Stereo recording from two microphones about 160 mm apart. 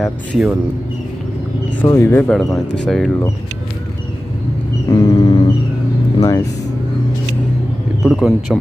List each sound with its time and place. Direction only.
0.0 s speech: 5° right (ahead or behind)
1.8 s speech: 15° left (ahead or behind)
2.8 s speech: 5° left (ahead or behind)
4.9 s a sound: 30° left (ahead or behind)
6.1 s speech: 20° left (ahead or behind)
8.0 s speech: centre (ahead or behind)